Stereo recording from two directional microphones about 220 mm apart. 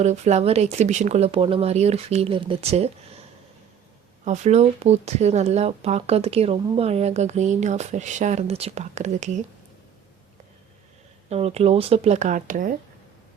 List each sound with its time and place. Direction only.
0.0 s speech: 30° right (ahead or behind)
4.3 s speech: 30° right (ahead or behind)
11.3 s speech: 30° right (ahead or behind)